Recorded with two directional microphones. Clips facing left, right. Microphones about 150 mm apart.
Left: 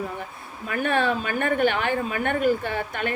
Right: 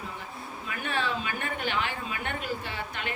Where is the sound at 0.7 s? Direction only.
55° left (ahead or behind).